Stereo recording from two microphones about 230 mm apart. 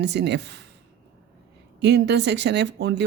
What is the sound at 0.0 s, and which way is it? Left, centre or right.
Speech, right.